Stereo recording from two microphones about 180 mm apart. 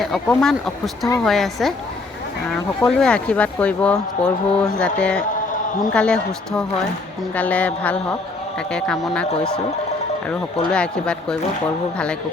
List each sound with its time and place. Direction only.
0.0 s a woman's voice: 5° left (ahead or behind)